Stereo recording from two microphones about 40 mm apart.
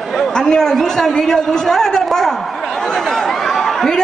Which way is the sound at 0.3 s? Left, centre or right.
Centre.